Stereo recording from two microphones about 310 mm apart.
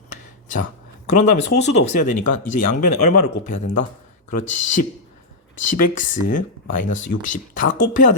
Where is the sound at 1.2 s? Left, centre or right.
Left.